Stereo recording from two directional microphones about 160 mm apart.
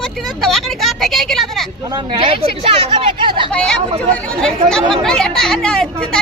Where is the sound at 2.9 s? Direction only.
30° right (ahead or behind).